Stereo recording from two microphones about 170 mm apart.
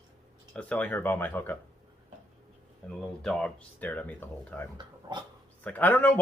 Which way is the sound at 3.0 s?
5° left (ahead or behind).